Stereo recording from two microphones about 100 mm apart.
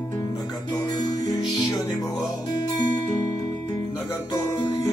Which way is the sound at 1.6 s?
40° left (ahead or behind).